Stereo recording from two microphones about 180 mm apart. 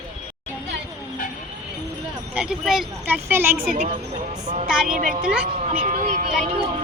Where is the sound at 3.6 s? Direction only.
50° right (ahead or behind).